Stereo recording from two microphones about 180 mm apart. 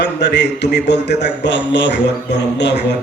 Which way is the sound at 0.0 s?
70° left (ahead or behind).